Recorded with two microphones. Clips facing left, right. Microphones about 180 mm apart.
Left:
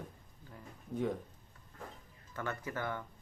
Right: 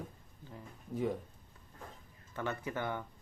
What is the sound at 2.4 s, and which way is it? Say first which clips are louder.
Speech: right 2 dB; 15° right (ahead or behind).